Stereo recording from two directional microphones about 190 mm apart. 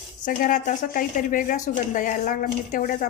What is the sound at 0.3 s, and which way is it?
A woman's voice, 45° left (ahead or behind).